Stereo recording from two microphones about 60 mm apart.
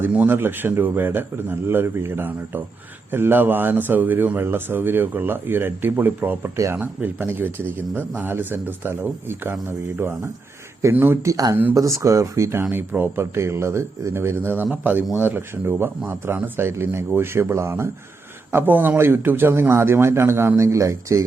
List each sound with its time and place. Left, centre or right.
0.1 s a man's voice: right
0.3 s speech: right
11.2 s speech: right
11.7 s speech: right
18.5 s speech: right